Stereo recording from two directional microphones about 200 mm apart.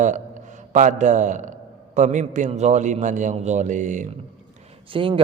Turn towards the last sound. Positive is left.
turn(degrees=-25)  # may be behind; listen again after turning